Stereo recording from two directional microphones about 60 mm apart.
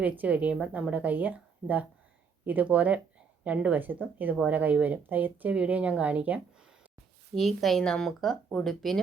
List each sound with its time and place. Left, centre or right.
0.0 s speech: right
7.3 s speech: centre